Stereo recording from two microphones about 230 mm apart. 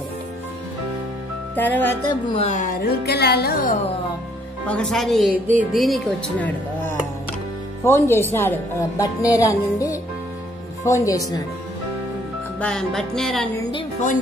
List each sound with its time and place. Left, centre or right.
1.5 s speech: centre
2.0 s speech: left
4.6 s speech: centre
12.5 s speech: centre